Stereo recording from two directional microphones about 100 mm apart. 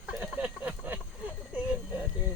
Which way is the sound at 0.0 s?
15° right (ahead or behind).